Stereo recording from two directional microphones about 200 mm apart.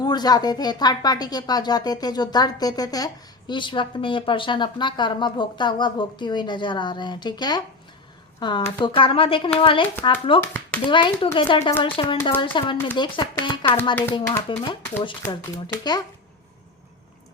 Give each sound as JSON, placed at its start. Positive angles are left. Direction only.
{"t": 0.0, "sound": "speech", "side_deg": 20}